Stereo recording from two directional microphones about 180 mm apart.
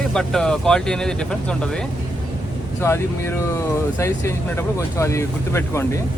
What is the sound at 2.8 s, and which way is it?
Speech, 15° left (ahead or behind).